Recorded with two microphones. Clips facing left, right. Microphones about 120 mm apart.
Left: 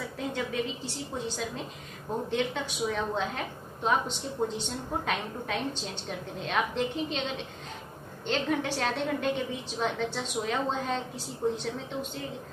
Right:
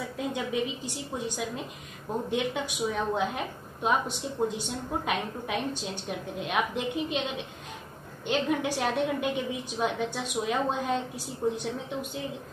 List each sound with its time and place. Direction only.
0.3 s a woman's voice: 15° right (ahead or behind)